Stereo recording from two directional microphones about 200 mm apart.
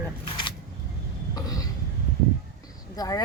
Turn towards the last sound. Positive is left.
turn(degrees=20)  # may be behind; listen again after turning